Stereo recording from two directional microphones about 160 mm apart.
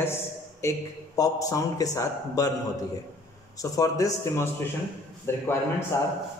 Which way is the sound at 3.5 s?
20° left (ahead or behind).